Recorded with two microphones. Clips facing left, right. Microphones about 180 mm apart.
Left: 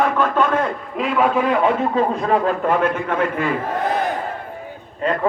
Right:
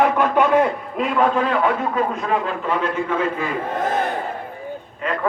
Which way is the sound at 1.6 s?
35° left (ahead or behind).